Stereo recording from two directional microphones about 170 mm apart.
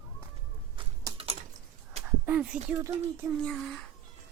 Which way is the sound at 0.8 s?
30° right (ahead or behind).